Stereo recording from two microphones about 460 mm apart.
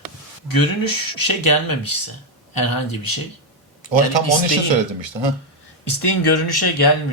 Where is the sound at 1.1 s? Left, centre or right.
Left.